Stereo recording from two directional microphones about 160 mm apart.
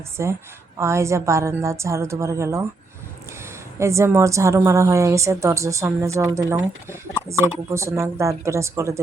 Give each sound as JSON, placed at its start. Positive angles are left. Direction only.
{"t": 0.2, "sound": "a woman's voice", "side_deg": -15}
{"t": 3.8, "sound": "a woman's voice", "side_deg": -20}